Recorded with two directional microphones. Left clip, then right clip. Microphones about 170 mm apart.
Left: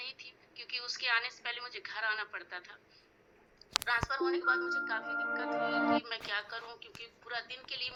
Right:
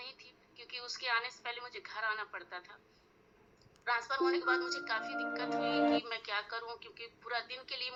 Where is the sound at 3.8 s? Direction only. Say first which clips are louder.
Even; 35° left (ahead or behind).